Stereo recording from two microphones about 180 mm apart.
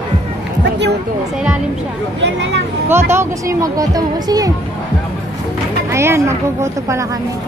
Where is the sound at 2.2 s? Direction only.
75° right (ahead or behind).